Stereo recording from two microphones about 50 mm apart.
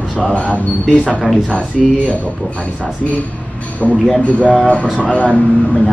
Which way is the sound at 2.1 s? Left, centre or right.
Left.